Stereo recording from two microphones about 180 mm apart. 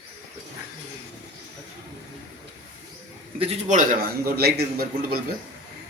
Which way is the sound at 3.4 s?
40° right (ahead or behind).